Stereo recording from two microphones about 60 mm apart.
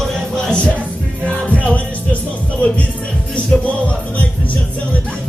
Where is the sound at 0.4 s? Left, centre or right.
Centre.